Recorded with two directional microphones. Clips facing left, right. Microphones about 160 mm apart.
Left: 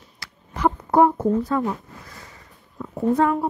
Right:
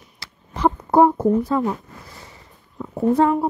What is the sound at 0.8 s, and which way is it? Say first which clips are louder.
Speech: right 2 dB; 30° right (ahead or behind).